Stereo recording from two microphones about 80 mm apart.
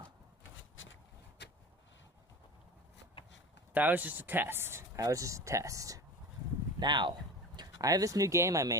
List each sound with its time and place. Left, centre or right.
3.7 s speech: right
4.9 s speech: right
6.7 s speech: right
7.5 s speech: right